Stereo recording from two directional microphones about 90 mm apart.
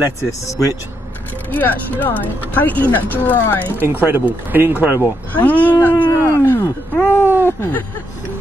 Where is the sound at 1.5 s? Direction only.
20° left (ahead or behind).